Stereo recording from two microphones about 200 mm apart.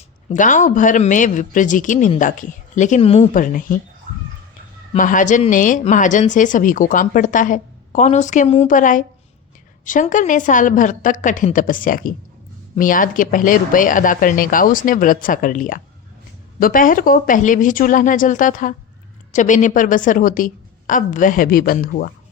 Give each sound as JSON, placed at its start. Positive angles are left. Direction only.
{"t": 0.3, "sound": "speech", "side_deg": 40}
{"t": 3.3, "sound": "speech", "side_deg": 40}
{"t": 4.9, "sound": "speech", "side_deg": 40}